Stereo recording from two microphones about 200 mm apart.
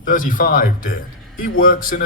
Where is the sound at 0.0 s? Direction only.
40° left (ahead or behind).